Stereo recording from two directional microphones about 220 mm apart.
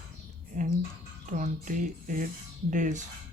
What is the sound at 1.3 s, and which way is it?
Speech, 35° right (ahead or behind).